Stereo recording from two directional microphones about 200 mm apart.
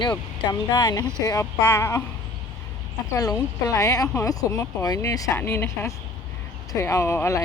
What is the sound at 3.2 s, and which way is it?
Speech, 15° left (ahead or behind).